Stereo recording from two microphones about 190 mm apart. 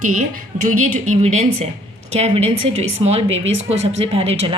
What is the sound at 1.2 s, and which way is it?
A woman's voice, 35° right (ahead or behind).